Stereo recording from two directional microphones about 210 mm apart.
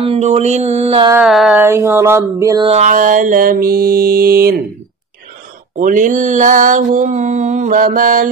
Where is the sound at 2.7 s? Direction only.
35° right (ahead or behind).